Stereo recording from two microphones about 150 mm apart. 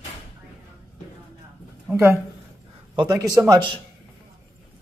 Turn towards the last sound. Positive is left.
turn(degrees=-25)  # may be behind; listen again after turning